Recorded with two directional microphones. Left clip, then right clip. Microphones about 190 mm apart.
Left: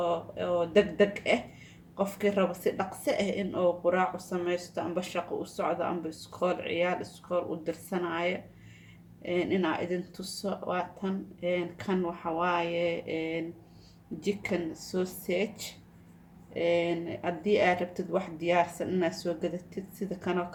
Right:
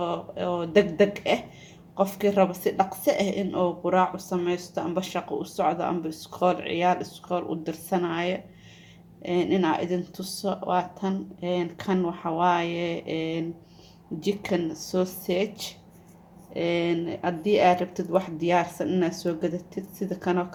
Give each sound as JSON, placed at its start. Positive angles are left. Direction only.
{"t": 0.0, "sound": "speech", "side_deg": -35}